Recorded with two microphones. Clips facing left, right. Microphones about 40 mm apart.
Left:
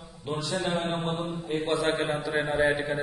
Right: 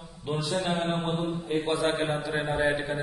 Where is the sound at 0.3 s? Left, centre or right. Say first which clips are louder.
Right 1 dB; centre.